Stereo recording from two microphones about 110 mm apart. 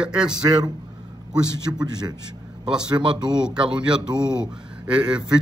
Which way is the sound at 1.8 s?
40° right (ahead or behind).